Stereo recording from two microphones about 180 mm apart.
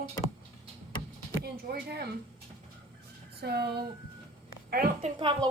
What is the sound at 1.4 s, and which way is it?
Speech, 60° right (ahead or behind).